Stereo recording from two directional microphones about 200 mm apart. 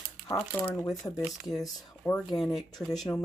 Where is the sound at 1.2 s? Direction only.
Centre (ahead or behind).